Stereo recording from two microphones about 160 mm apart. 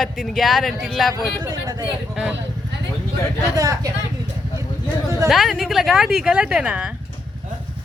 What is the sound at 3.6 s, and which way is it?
Speech, 20° right (ahead or behind).